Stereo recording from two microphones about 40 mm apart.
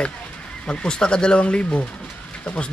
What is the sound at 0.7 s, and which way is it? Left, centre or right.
Speech, left.